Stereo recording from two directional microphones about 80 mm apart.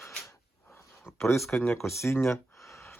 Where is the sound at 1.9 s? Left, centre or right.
Left.